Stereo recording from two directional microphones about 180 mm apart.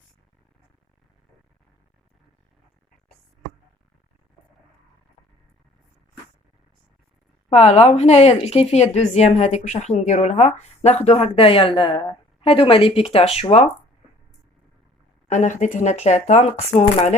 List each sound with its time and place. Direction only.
7.5 s a woman's voice: 40° left (ahead or behind)
15.3 s a woman's voice: 40° left (ahead or behind)